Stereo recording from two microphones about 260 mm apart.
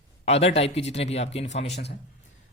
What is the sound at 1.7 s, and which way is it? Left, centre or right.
Speech, left.